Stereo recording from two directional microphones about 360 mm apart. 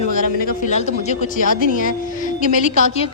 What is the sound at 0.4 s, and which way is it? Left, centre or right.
A woman's voice, centre.